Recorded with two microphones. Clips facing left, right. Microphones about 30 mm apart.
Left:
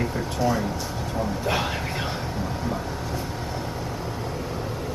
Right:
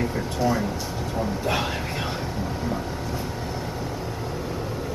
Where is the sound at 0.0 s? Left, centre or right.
Centre.